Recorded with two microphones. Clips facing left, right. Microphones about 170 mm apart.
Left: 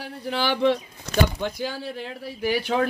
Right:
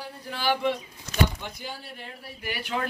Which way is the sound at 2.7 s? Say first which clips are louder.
Left 5 dB; 75° left (ahead or behind).